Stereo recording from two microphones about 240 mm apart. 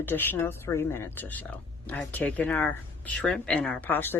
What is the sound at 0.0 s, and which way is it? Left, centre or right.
Speech, centre.